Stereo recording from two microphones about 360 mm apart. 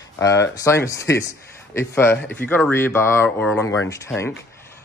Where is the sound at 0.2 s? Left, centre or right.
Centre.